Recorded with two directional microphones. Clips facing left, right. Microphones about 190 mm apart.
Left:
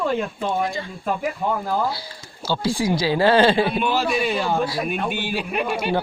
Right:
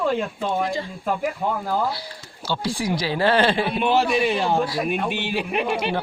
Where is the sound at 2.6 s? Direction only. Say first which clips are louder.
Left 4 dB; 30° left (ahead or behind).